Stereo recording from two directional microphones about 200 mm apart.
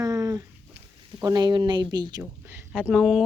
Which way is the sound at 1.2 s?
20° right (ahead or behind).